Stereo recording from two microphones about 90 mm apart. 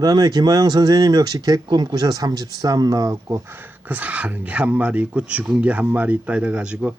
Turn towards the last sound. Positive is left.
turn(degrees=-10)  # may be behind; listen again after turning